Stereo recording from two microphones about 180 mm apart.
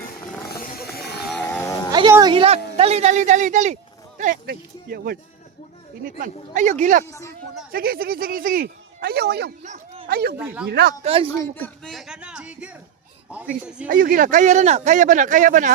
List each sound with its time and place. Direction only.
0.4 s music: 55° left (ahead or behind)
1.3 s livestock: 5° left (ahead or behind)
1.6 s a sound: 20° left (ahead or behind)
1.9 s speech: 20° right (ahead or behind); by 7.0 s 40° right (ahead or behind)
7.0 s speech: 15° left (ahead or behind)
7.7 s speech: 55° right (ahead or behind)
9.6 s a sound: 35° right (ahead or behind)
10.1 s speech: 60° right (ahead or behind)
11.0 s speech: 30° right (ahead or behind)
11.3 s speech: 10° left (ahead or behind); by 12.7 s 5° right (ahead or behind)
13.8 s speech: 50° right (ahead or behind)